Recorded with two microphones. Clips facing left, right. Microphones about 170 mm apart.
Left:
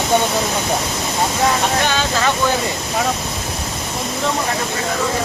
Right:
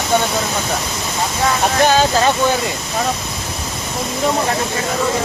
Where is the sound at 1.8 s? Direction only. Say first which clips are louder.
Right 5 dB; 40° right (ahead or behind).